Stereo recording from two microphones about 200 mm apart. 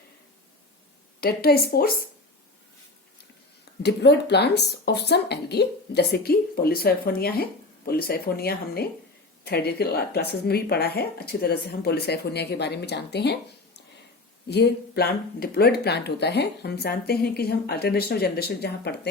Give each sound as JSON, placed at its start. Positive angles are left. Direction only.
{"t": 1.2, "sound": "speech", "side_deg": 50}
{"t": 3.8, "sound": "speech", "side_deg": 55}
{"t": 14.4, "sound": "speech", "side_deg": 55}